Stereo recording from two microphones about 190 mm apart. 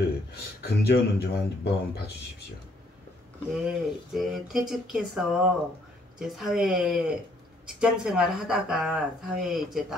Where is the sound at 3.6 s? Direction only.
Centre (ahead or behind).